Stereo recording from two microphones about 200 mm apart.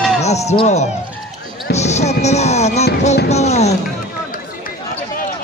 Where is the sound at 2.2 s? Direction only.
35° left (ahead or behind).